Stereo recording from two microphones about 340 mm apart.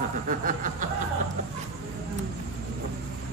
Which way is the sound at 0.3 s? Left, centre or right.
Right.